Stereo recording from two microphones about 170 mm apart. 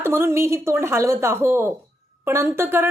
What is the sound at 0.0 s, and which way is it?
A woman's voice, 15° right (ahead or behind).